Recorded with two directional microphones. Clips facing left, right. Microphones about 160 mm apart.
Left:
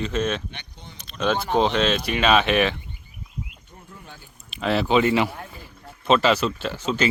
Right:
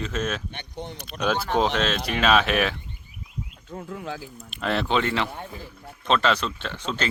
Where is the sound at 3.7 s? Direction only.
90° right.